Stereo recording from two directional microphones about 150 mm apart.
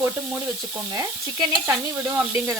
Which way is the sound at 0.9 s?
20° right (ahead or behind).